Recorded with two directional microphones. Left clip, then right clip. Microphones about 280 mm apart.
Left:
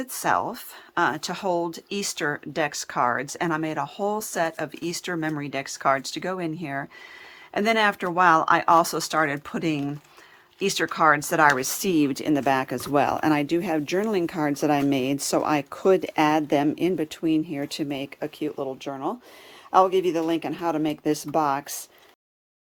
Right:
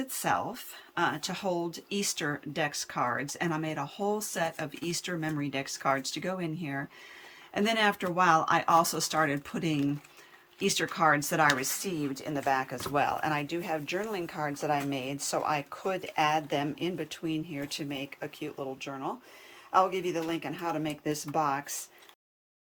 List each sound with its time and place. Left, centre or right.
0.1 s speech: centre